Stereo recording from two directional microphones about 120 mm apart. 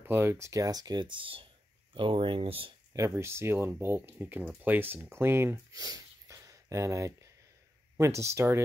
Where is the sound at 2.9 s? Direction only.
25° right (ahead or behind).